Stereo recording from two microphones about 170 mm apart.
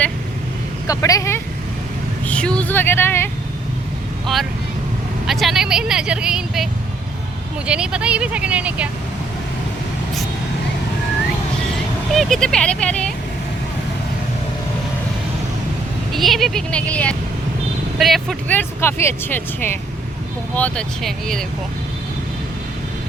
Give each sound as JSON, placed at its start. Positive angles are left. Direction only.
{"t": 0.9, "sound": "speech", "side_deg": 20}
{"t": 2.2, "sound": "speech", "side_deg": 5}
{"t": 5.2, "sound": "speech", "side_deg": 0}
{"t": 7.7, "sound": "a woman's voice", "side_deg": -5}
{"t": 12.1, "sound": "speech", "side_deg": 0}
{"t": 16.1, "sound": "speech", "side_deg": 0}